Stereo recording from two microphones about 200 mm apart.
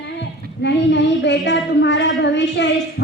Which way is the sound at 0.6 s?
60° left (ahead or behind).